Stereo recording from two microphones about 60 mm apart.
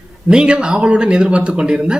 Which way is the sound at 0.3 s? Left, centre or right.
Centre.